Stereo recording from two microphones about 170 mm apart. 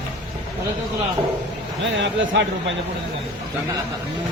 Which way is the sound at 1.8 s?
90° right.